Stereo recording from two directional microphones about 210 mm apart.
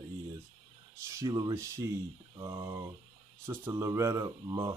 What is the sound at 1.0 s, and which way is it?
Speech, 15° right (ahead or behind).